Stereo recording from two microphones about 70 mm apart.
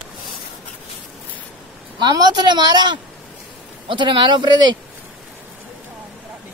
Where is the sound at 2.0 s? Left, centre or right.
Right.